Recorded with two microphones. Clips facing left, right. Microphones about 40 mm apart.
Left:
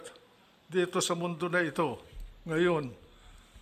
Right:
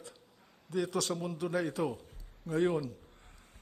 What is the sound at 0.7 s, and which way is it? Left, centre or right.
A man's voice, left.